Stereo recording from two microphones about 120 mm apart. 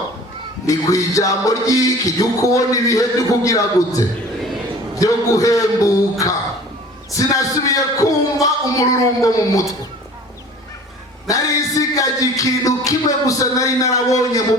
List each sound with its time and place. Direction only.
0.7 s music: 25° left (ahead or behind)
7.1 s a man's voice: 30° left (ahead or behind)
11.3 s music: 30° left (ahead or behind)